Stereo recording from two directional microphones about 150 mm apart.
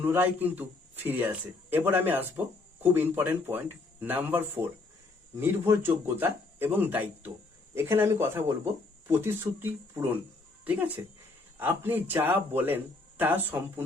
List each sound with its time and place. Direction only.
0.0 s a man's voice: 15° right (ahead or behind)